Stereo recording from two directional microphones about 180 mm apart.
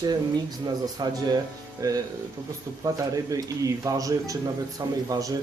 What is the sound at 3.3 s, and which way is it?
A man's voice, 20° right (ahead or behind).